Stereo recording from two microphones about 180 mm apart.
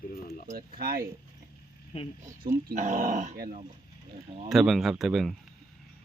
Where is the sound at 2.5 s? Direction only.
50° right (ahead or behind).